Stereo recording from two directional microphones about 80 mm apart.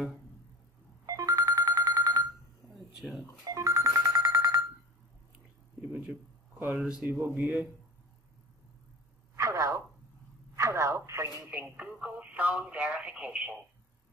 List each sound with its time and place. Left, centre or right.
1.0 s telephone bell ringing: right
3.0 s telephone dialing: centre
3.4 s a sound: right
6.6 s speech: centre
7.1 s speech: right
9.4 s a sound: right
10.5 s telephone: right
11.4 s radio: right